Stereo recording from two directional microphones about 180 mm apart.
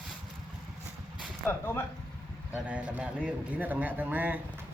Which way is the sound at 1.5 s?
10° left (ahead or behind).